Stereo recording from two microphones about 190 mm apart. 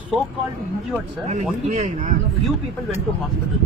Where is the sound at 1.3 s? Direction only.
40° right (ahead or behind).